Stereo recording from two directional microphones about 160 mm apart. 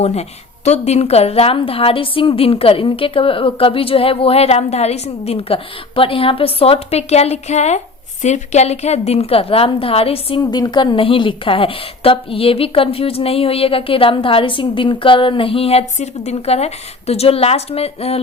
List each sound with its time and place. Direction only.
0.0 s a woman's voice: 40° left (ahead or behind)
10.4 s a woman's voice: 25° left (ahead or behind)